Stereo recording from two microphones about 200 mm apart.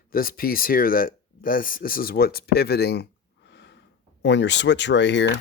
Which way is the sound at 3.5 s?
60° left (ahead or behind).